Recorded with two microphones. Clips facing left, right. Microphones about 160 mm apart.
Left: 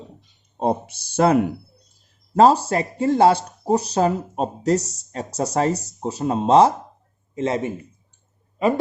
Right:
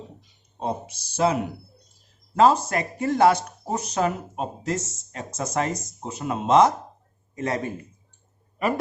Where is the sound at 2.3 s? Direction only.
35° left (ahead or behind).